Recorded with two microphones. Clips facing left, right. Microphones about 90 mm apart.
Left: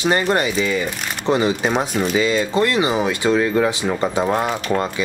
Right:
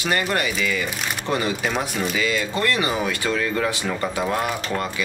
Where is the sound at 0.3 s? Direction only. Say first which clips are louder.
Left 5 dB; 25° left (ahead or behind).